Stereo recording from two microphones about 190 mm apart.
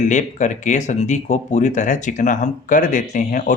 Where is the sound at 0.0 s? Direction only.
40° left (ahead or behind).